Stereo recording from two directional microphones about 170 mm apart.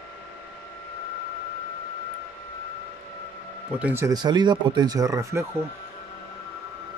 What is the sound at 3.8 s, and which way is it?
Speech, 15° right (ahead or behind).